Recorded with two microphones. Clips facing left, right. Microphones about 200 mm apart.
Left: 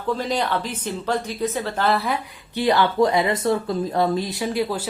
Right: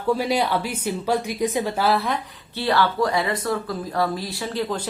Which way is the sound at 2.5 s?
15° left (ahead or behind).